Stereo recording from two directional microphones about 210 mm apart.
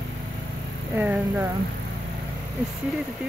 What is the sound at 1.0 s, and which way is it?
Speech, 10° right (ahead or behind).